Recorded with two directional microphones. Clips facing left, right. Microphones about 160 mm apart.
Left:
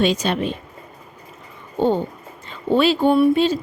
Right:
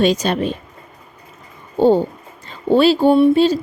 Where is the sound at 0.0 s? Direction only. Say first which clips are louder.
Right 3 dB; 40° right (ahead or behind).